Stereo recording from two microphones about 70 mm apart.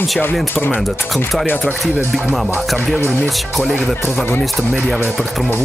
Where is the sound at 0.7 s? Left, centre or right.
Centre.